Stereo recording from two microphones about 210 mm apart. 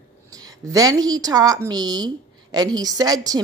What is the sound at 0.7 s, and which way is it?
A woman's voice, 15° right (ahead or behind).